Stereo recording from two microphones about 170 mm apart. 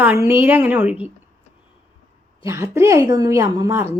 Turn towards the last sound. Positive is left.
turn(degrees=-15)  # may be behind; listen again after turning